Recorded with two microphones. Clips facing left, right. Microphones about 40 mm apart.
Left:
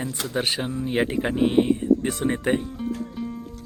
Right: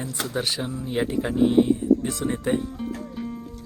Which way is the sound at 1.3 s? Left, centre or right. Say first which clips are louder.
Right 2 dB; left.